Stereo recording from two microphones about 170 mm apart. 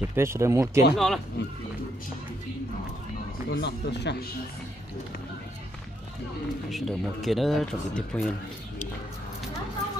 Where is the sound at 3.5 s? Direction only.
90° left.